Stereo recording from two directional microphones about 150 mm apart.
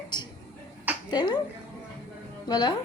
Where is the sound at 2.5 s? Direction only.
30° left (ahead or behind).